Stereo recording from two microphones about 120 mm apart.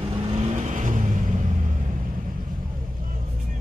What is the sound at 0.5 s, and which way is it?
Vehicle, 90° right.